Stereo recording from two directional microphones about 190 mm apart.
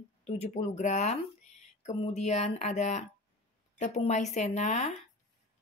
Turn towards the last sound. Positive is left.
turn(degrees=35)  # may be behind; listen again after turning